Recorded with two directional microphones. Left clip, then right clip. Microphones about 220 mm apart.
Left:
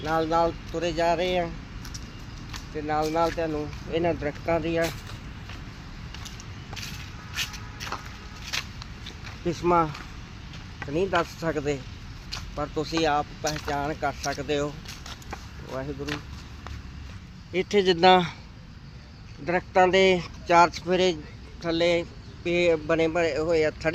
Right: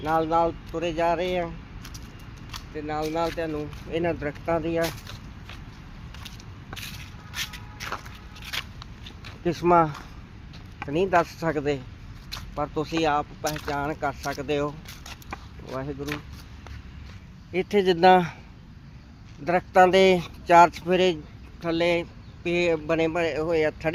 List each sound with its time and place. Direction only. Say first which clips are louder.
0.0 s speech: right 1 dB; 35° right (ahead or behind)
2.5 s speech: left 3 dB; 10° right (ahead or behind)
7.3 s shuffle: left 1 dB; 10° right (ahead or behind)
8.4 s a sound: left 1 dB; centre (ahead or behind)
9.4 s speech: right 3 dB; 40° right (ahead or behind)
17.5 s speech: even; 30° right (ahead or behind)
19.5 s speech: right 3 dB; 45° right (ahead or behind)